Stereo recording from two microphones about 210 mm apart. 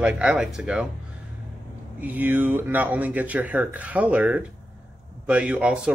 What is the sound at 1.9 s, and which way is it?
Speech, 10° right (ahead or behind).